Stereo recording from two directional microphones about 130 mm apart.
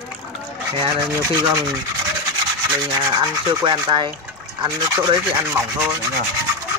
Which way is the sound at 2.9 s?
30° right (ahead or behind).